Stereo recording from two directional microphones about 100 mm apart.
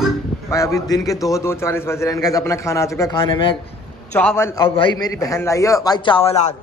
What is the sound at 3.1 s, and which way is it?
Speech, 60° left (ahead or behind).